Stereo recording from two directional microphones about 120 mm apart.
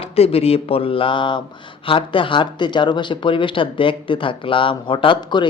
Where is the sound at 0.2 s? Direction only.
55° left (ahead or behind).